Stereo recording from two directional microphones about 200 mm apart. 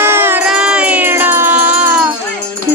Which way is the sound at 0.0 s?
10° right (ahead or behind).